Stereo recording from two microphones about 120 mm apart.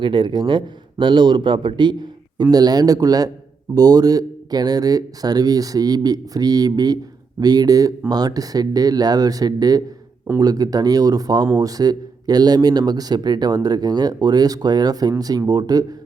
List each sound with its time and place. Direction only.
0.0 s speech: 45° right (ahead or behind)